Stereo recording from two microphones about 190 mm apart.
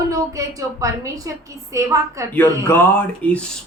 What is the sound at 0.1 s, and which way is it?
A woman's voice, 15° right (ahead or behind).